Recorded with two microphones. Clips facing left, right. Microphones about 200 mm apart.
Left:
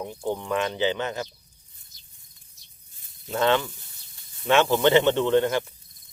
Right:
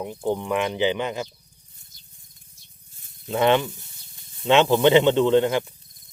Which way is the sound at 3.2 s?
15° right (ahead or behind).